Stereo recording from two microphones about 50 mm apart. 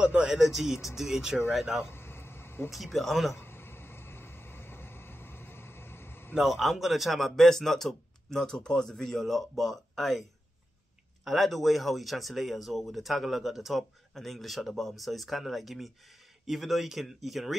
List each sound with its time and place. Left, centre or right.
0.0 s speech: centre
0.3 s speech: centre
1.9 s a sound: left
2.7 s speech: centre
3.3 s a sound: left
6.4 s speech: centre
11.2 s speech: centre